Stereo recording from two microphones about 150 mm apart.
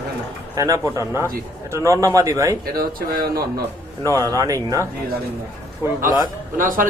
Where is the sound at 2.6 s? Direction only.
80° right.